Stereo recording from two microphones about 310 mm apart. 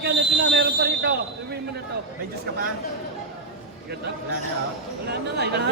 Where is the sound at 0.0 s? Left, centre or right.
Right.